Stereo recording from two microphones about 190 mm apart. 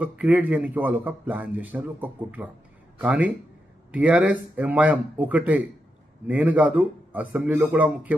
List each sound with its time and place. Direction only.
0.0 s speech: 5° right (ahead or behind)